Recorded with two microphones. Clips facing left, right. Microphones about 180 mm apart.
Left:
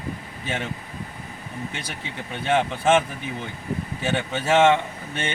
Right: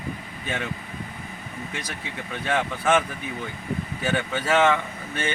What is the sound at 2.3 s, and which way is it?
Speech, 25° left (ahead or behind).